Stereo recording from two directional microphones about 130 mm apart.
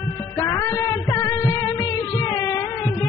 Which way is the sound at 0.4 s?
25° left (ahead or behind).